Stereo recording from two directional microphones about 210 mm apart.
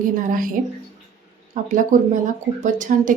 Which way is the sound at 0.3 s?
40° right (ahead or behind).